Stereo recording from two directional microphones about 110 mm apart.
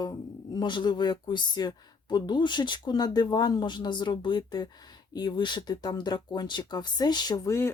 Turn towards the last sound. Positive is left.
turn(degrees=25)  # may be behind; listen again after turning